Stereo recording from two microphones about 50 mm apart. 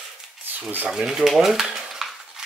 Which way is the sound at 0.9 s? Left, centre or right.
Centre.